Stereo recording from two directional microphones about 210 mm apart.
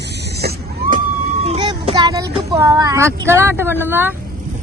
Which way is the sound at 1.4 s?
25° right (ahead or behind).